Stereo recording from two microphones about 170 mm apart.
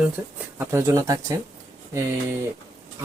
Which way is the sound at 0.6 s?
15° right (ahead or behind).